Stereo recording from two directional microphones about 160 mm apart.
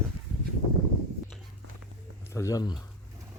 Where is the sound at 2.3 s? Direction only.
20° left (ahead or behind).